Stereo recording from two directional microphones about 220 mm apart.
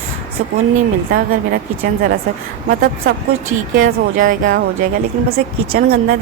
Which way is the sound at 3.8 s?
35° right (ahead or behind).